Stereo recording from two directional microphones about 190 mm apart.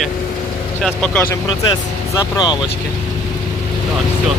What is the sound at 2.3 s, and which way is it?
Speech, 20° left (ahead or behind).